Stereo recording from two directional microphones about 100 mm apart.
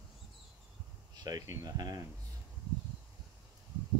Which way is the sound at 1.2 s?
35° right (ahead or behind).